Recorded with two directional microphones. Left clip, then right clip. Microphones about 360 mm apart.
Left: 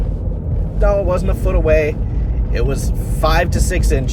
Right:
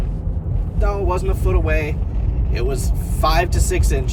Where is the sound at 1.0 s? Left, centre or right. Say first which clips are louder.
Left 3 dB; centre.